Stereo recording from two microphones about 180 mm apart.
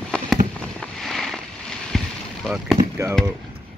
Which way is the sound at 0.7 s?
5° left (ahead or behind).